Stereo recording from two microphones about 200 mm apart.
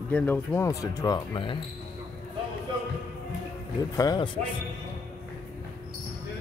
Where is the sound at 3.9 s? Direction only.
20° left (ahead or behind).